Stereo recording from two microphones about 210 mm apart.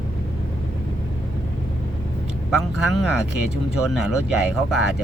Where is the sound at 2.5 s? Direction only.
5° right (ahead or behind).